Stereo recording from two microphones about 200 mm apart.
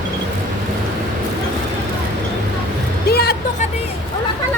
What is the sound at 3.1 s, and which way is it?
Music, 50° left (ahead or behind).